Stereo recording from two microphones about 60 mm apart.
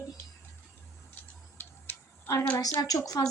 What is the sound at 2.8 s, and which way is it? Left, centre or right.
Speech, left.